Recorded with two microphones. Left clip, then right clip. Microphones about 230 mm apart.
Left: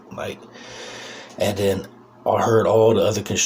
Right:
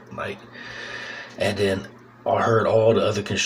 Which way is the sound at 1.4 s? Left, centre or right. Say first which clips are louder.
Left 2 dB; left.